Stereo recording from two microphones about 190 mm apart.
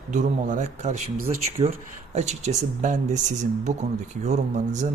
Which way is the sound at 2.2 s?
35° right (ahead or behind).